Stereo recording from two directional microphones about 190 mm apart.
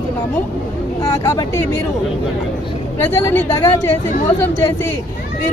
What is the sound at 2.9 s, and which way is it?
Speech, 10° left (ahead or behind).